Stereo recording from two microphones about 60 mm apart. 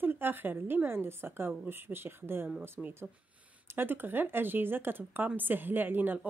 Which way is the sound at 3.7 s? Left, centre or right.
Right.